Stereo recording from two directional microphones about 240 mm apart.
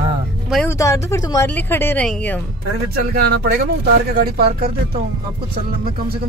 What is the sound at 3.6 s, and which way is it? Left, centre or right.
Speech, right.